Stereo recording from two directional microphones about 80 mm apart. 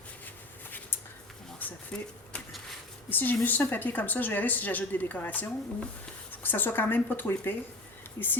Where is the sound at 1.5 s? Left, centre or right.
Centre.